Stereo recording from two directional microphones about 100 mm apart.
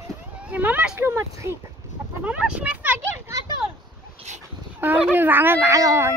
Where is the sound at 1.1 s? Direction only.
25° right (ahead or behind).